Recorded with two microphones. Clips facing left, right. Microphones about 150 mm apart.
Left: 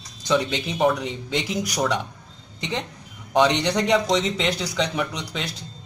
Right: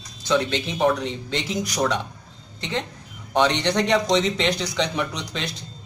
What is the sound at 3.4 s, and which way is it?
Speech, 10° left (ahead or behind).